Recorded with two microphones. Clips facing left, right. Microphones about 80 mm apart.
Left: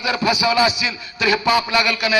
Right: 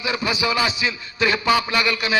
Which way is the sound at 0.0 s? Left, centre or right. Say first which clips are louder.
Left 4 dB; right.